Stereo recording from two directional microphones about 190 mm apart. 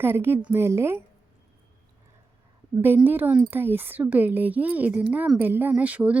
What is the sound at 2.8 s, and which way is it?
A woman's voice, 10° right (ahead or behind).